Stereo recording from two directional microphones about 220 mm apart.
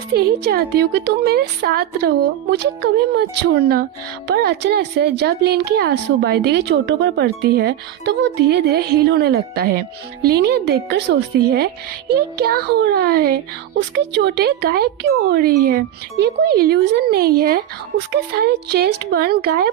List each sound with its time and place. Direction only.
0.1 s speech: 45° right (ahead or behind)